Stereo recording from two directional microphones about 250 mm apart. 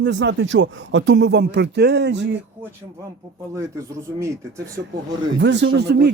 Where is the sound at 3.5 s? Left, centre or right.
Centre.